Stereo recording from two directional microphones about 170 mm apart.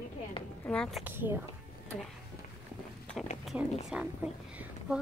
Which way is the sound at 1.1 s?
10° right (ahead or behind).